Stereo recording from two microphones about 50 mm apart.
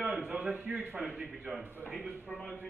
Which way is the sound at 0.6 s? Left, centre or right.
Right.